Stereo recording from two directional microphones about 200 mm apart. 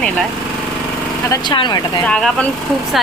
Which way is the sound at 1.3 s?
20° left (ahead or behind).